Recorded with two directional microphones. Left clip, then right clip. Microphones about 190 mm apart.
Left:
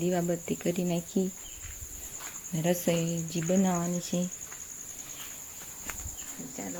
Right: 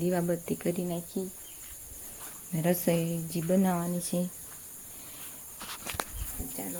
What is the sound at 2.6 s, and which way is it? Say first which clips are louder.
Speech: even; 10° right (ahead or behind).